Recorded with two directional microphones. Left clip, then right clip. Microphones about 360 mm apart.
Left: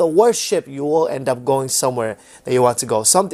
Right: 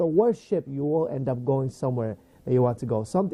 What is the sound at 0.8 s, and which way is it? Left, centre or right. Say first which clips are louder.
Speech: left 9 dB; centre.